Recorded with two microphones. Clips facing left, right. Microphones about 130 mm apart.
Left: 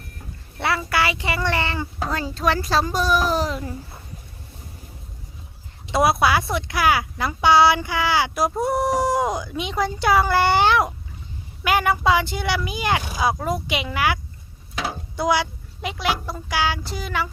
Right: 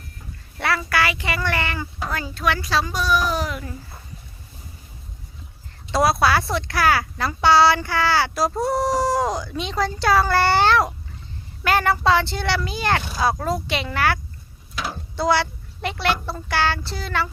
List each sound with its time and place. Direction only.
0.6 s a child's voice: 20° left (ahead or behind); by 3.6 s 35° left (ahead or behind)
5.9 s speech: 20° left (ahead or behind)
15.1 s a sound: 15° left (ahead or behind)
16.2 s speech: 10° left (ahead or behind)